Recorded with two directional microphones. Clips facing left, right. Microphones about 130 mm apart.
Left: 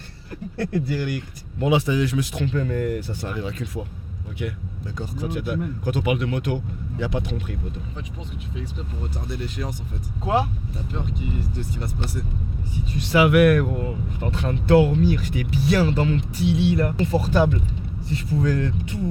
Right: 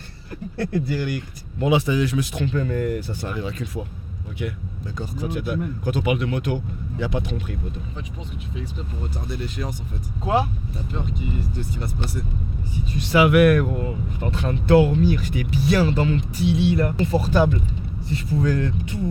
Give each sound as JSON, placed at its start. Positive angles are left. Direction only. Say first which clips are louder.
{"t": 0.3, "sound": "speech", "louder": "right 1 dB", "side_deg": -10}
{"t": 4.9, "sound": "speech", "louder": "right 1 dB", "side_deg": -15}
{"t": 8.5, "sound": "speech", "louder": "right 1 dB", "side_deg": -15}
{"t": 11.8, "sound": "speech", "louder": "right 1 dB", "side_deg": -10}